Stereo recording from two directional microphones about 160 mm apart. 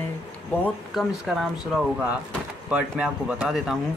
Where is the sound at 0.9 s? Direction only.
5° right (ahead or behind).